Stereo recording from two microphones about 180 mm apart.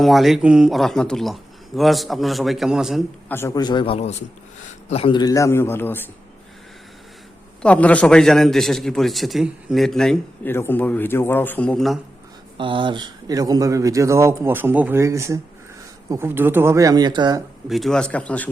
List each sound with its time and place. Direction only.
0.0 s a man's voice: centre (ahead or behind)
3.2 s a man's voice: 15° left (ahead or behind)
7.6 s a man's voice: 5° left (ahead or behind)
12.5 s a man's voice: 25° right (ahead or behind)
17.7 s speech: centre (ahead or behind)